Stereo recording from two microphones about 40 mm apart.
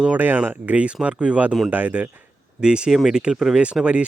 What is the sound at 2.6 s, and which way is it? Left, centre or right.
Speech, right.